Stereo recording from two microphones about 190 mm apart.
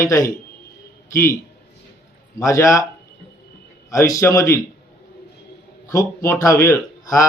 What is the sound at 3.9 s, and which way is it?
Speech, 15° left (ahead or behind).